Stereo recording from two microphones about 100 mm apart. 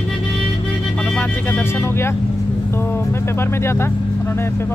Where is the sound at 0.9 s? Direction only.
10° left (ahead or behind).